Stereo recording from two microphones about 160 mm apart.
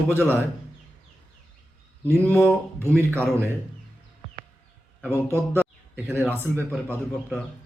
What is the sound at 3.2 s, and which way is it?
Speech, 15° right (ahead or behind).